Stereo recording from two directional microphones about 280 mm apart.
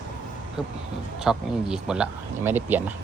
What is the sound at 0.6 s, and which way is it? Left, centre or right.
Speech, centre.